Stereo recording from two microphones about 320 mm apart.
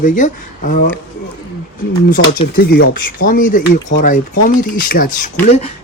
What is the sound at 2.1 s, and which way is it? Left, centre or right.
Speech, left.